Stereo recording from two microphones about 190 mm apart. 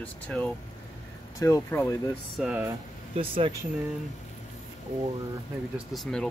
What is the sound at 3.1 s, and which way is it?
Speech, 30° right (ahead or behind).